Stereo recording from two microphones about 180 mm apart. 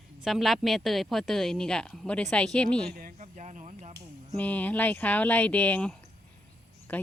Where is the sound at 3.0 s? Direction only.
45° right (ahead or behind).